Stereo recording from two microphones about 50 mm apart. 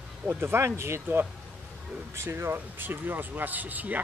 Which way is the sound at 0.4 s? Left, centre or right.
Right.